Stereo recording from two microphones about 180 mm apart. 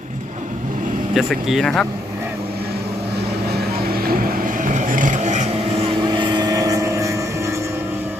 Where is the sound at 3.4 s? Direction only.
60° right (ahead or behind); by 7.6 s 15° right (ahead or behind).